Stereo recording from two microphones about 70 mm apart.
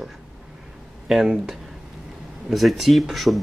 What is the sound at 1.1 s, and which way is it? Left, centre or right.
Speech, centre.